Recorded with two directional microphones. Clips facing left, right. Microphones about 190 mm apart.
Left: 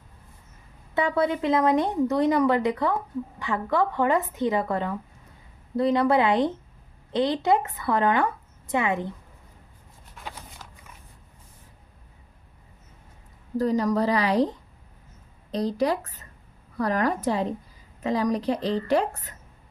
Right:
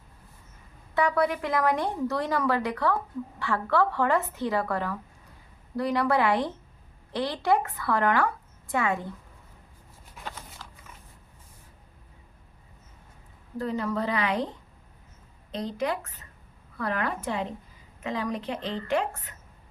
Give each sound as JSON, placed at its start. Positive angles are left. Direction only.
{"t": 0.9, "sound": "speech", "side_deg": 25}
{"t": 10.2, "sound": "a sound", "side_deg": 5}
{"t": 13.6, "sound": "a woman's voice", "side_deg": 40}
{"t": 15.5, "sound": "a woman's voice", "side_deg": 35}